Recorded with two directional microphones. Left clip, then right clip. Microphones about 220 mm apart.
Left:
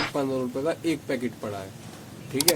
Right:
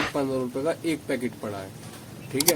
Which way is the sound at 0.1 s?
5° right (ahead or behind).